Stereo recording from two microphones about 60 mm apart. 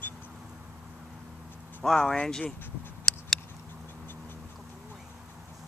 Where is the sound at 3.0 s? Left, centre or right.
Centre.